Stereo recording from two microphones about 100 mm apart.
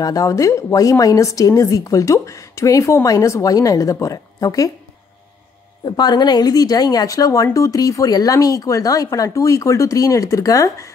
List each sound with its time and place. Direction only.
0.0 s speech: 35° left (ahead or behind)
5.9 s speech: 45° left (ahead or behind)